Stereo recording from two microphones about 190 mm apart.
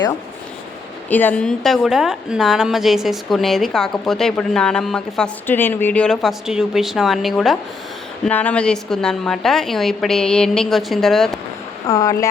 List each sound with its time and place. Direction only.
1.1 s a woman's voice: 10° left (ahead or behind)
11.9 s speech: 20° left (ahead or behind)